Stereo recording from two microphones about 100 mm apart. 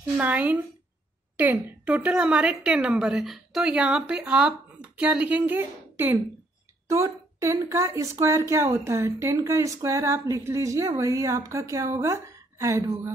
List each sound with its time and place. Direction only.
0.2 s a woman's voice: 15° right (ahead or behind); by 13.1 s 30° right (ahead or behind)